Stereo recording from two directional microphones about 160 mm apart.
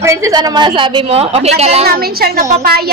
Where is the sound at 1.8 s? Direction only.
70° right (ahead or behind).